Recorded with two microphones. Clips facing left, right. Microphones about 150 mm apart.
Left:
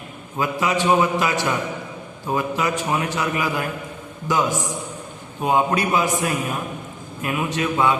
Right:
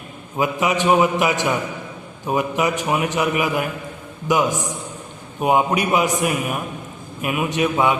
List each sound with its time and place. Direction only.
0.3 s a man's voice: 20° right (ahead or behind)